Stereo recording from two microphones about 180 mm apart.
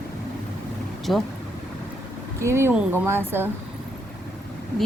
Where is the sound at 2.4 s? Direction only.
15° right (ahead or behind).